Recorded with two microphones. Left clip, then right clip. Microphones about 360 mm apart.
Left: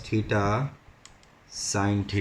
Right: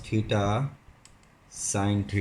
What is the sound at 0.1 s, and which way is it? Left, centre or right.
Speech, centre.